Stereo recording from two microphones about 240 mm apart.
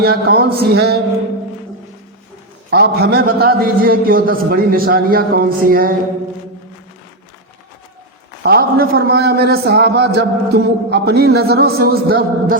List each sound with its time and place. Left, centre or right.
0.0 s a man's voice: right
2.6 s a man's voice: right
8.4 s a man's voice: right